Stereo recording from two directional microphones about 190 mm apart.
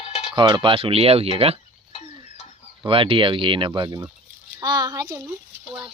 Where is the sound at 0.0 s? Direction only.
35° left (ahead or behind).